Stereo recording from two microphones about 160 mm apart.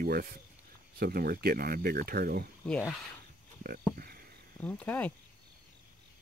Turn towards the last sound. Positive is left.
turn(degrees=10)  # may be behind; listen again after turning